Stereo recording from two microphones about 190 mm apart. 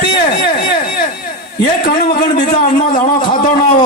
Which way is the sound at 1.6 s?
50° left (ahead or behind).